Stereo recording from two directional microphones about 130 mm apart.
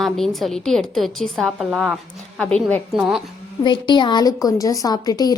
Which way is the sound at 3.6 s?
35° left (ahead or behind).